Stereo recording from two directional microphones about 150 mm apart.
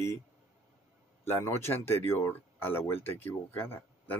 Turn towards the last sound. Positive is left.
turn(degrees=15)  # may be behind; listen again after turning